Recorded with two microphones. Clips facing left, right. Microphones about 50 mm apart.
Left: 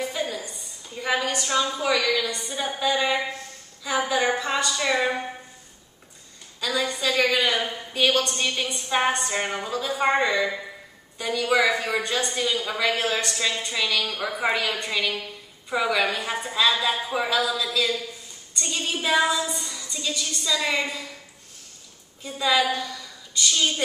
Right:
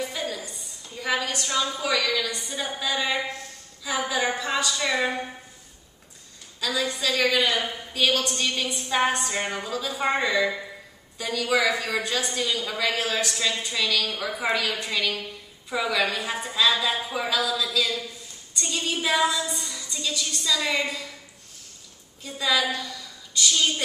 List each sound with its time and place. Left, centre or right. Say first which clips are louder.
0.0 s a sound: left 2 dB; centre
1.0 s music: left 2 dB; centre
1.7 s speech: left 2 dB; centre
3.8 s music: left 3 dB; centre
6.6 s music: left 1 dB; centre
8.4 s speech: left 1 dB; centre
18.6 s music: even; centre
22.2 s a woman's voice: left 2 dB; centre